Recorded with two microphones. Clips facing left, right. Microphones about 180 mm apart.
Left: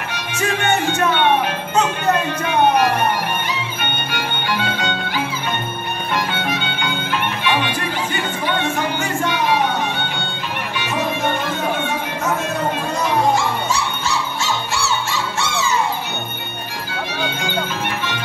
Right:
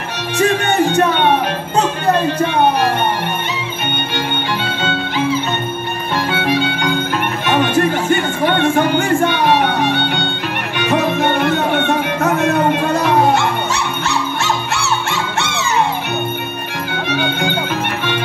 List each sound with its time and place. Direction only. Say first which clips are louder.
4.1 s music: right 2 dB; 25° right (ahead or behind)
7.4 s music: right 10 dB; 45° right (ahead or behind); by 15.8 s 65° right (ahead or behind)